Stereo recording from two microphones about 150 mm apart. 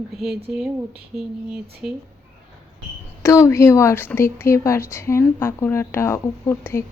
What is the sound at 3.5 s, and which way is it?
Speech, 20° left (ahead or behind).